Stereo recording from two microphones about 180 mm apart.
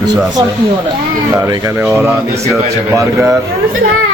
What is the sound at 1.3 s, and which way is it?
Speech, 15° right (ahead or behind).